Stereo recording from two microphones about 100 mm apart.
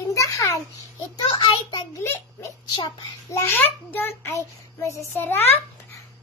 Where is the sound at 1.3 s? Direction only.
55° left (ahead or behind).